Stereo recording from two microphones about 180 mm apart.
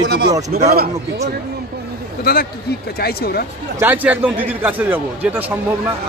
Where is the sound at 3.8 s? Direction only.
10° right (ahead or behind).